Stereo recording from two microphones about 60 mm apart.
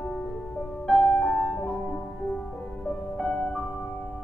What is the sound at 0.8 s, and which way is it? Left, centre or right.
Music, centre.